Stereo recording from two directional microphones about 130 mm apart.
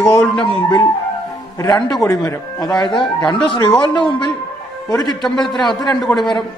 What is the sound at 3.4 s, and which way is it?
Speech, 35° left (ahead or behind).